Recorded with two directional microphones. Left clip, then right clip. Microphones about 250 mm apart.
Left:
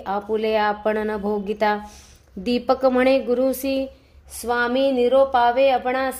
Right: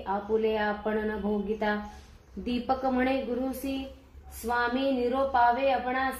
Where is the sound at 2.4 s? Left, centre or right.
Left.